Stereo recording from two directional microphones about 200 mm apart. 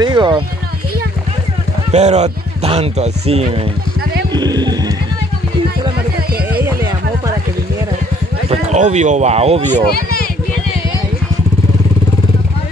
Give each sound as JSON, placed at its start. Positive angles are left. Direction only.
{"t": 0.0, "sound": "a sound", "side_deg": -25}
{"t": 1.9, "sound": "speech", "side_deg": -35}
{"t": 4.3, "sound": "speech", "side_deg": -20}
{"t": 8.5, "sound": "speech", "side_deg": -35}
{"t": 9.8, "sound": "speech", "side_deg": 50}